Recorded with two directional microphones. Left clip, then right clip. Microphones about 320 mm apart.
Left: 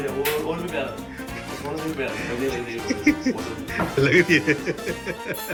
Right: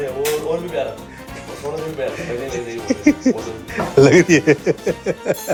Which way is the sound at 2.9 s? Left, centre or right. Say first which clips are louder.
Right 6 dB; right.